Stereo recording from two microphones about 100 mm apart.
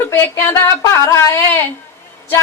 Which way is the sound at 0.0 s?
25° left (ahead or behind).